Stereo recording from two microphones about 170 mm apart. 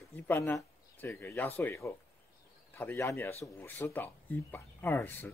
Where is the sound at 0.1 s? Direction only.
15° left (ahead or behind).